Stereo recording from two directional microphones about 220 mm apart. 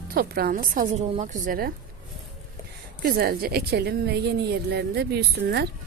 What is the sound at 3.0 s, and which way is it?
A woman's voice, 45° right (ahead or behind).